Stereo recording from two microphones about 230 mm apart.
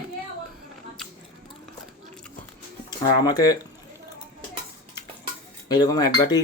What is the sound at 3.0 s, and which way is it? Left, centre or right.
Speech, centre.